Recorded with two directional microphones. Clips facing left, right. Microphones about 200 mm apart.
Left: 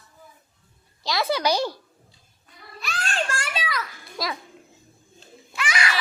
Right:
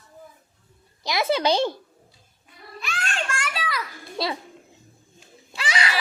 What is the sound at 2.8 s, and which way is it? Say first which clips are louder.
Children playing: left 2 dB; 35° left (ahead or behind).